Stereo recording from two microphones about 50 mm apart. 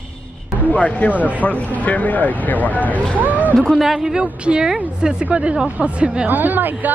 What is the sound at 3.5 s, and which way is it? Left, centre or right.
Speech, centre.